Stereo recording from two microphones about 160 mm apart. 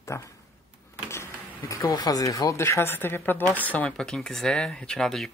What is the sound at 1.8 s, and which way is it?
Speech, 25° left (ahead or behind).